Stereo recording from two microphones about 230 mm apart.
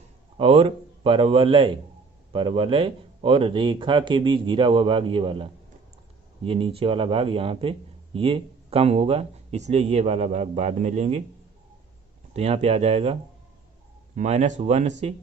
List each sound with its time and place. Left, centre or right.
0.3 s speech: right
12.3 s speech: right
14.2 s speech: right